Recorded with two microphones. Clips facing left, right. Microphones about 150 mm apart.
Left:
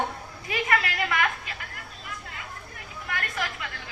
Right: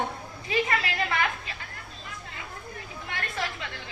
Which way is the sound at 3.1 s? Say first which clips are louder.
Left 1 dB; 25° right (ahead or behind).